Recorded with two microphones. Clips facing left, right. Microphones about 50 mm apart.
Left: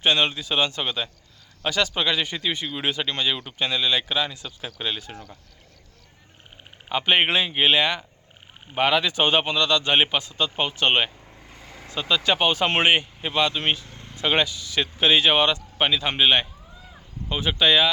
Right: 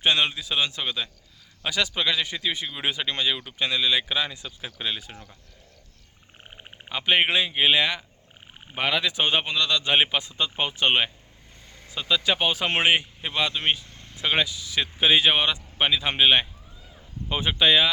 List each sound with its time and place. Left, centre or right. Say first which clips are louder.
0.0 s speech: left 1 dB; centre
6.8 s speech: left 2 dB; centre
10.2 s speech: left 2 dB; centre
13.9 s vehicle: left 4 dB; centre
14.2 s speech: left 2 dB; centre